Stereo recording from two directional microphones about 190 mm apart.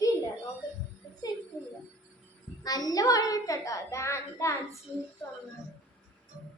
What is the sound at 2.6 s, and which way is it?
A child's voice, 20° left (ahead or behind).